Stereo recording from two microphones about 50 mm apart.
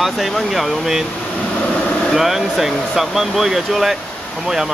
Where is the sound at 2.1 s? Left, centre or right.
Centre.